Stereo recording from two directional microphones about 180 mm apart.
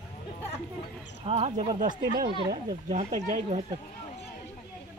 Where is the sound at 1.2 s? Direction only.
35° right (ahead or behind).